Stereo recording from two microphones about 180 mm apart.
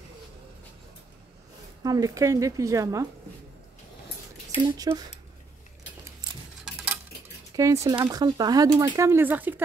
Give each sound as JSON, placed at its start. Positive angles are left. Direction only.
{"t": 1.8, "sound": "a woman's voice", "side_deg": -20}
{"t": 4.6, "sound": "speech", "side_deg": -20}
{"t": 6.6, "sound": "cutlery", "side_deg": -5}
{"t": 7.5, "sound": "a woman's voice", "side_deg": -15}